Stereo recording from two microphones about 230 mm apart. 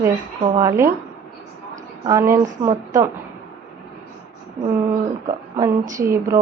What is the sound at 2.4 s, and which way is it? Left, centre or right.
Speech, right.